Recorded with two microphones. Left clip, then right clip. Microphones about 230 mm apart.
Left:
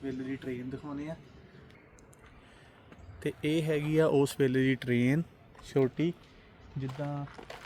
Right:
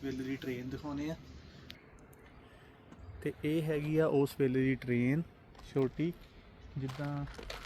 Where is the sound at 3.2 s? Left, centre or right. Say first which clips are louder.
Left 4 dB; left.